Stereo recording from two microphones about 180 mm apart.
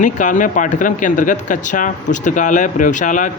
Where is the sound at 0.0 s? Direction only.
45° left (ahead or behind).